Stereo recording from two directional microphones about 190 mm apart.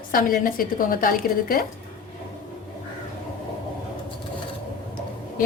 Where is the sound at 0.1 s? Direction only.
50° left (ahead or behind).